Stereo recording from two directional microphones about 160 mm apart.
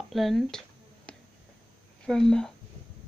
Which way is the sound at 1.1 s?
5° left (ahead or behind).